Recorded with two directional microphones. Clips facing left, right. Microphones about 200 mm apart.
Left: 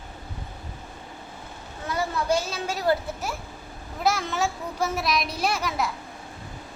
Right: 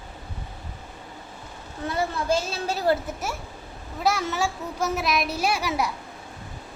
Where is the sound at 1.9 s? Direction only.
25° right (ahead or behind).